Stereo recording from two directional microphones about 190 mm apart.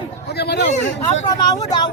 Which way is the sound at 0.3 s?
60° left (ahead or behind).